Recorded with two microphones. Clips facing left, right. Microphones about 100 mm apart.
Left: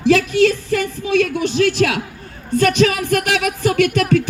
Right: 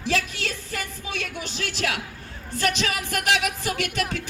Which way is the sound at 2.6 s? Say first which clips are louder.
Left 11 dB; 55° left (ahead or behind).